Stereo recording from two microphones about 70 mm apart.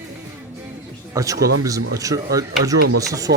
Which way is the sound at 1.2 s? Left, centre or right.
Right.